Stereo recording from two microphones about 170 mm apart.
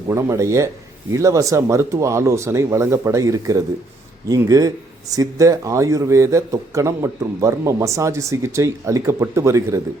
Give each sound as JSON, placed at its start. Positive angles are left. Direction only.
{"t": 0.1, "sound": "a man's voice", "side_deg": -15}